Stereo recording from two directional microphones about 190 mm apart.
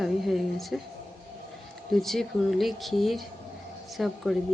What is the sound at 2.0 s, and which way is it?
A woman's voice, centre (ahead or behind).